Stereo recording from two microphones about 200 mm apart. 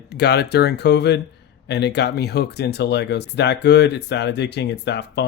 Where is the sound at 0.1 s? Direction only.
55° left (ahead or behind).